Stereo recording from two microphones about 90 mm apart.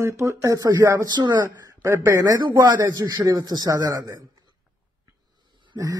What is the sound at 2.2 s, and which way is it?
A man's voice, 50° right (ahead or behind).